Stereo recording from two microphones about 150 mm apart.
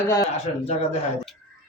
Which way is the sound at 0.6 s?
45° left (ahead or behind).